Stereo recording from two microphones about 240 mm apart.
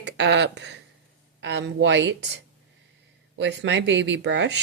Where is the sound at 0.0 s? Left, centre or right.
Right.